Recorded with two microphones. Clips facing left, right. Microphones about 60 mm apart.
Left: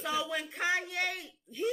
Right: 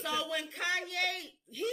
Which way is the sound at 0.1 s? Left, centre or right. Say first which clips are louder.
Left 2 dB; centre.